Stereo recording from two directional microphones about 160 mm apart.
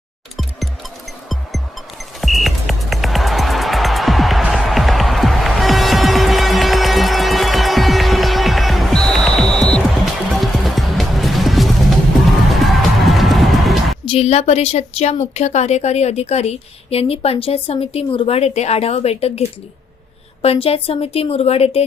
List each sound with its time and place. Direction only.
2.2 s music: centre (ahead or behind)
13.1 s music: centre (ahead or behind)
14.0 s speech: 35° left (ahead or behind)